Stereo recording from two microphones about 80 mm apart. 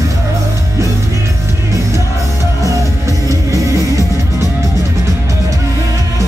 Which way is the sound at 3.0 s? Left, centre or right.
Right.